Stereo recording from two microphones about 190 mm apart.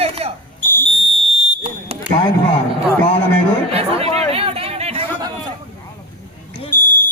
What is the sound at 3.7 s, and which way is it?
Chatter, 30° right (ahead or behind).